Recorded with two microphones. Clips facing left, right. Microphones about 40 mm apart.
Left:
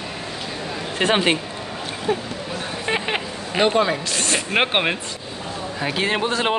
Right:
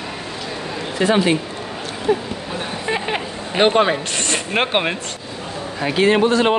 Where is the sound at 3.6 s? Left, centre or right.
Right.